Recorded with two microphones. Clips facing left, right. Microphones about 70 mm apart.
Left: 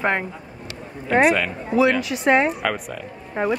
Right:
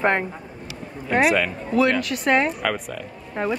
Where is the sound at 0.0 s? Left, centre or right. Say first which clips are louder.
Right 1 dB; centre.